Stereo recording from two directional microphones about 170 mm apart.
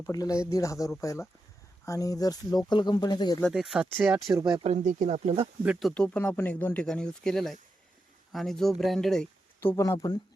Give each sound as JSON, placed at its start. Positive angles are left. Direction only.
{"t": 0.0, "sound": "speech", "side_deg": 20}
{"t": 3.5, "sound": "speech", "side_deg": -5}
{"t": 4.4, "sound": "speech", "side_deg": -25}
{"t": 4.6, "sound": "speech", "side_deg": -45}
{"t": 5.9, "sound": "speech", "side_deg": 5}
{"t": 9.6, "sound": "speech", "side_deg": 15}